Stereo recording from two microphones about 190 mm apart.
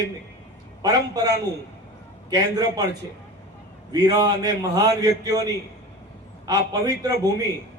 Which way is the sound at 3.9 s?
20° right (ahead or behind).